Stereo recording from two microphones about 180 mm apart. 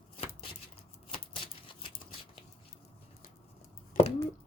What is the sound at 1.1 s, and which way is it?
Typewriter, 30° left (ahead or behind).